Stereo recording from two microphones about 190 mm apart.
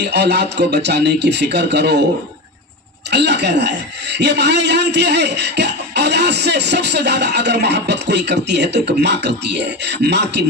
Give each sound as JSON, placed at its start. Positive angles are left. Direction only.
{"t": 0.0, "sound": "a man's voice", "side_deg": -60}
{"t": 3.1, "sound": "a man's voice", "side_deg": -65}